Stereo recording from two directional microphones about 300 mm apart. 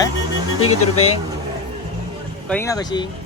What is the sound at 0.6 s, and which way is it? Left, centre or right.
Speech, left.